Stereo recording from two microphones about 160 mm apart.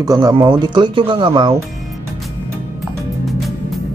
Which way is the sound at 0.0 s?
20° right (ahead or behind).